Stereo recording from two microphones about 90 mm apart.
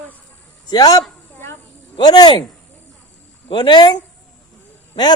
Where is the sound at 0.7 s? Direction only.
45° left (ahead or behind).